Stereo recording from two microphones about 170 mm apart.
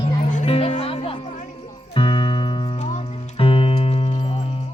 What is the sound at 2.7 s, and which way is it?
Music, 40° left (ahead or behind).